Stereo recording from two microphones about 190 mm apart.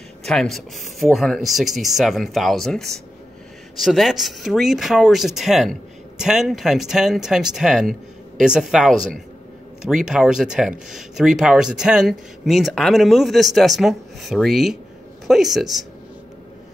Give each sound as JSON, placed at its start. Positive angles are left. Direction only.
{"t": 0.2, "sound": "speech", "side_deg": 0}